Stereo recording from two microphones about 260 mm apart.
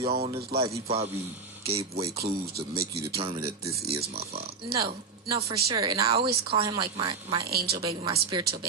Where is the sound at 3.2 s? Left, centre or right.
Right.